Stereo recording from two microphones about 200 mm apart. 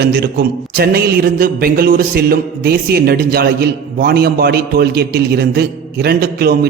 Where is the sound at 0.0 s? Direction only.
50° right (ahead or behind).